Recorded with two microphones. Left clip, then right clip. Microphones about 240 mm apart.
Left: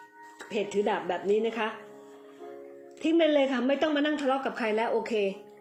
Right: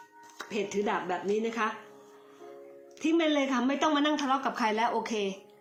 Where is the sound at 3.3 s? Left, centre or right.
Right.